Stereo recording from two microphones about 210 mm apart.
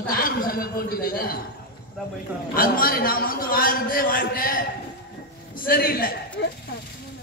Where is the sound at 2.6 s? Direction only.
45° left (ahead or behind).